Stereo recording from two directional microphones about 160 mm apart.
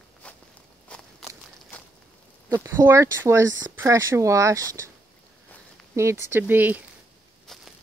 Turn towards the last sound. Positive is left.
turn(degrees=0)  # may be behind; listen again after turning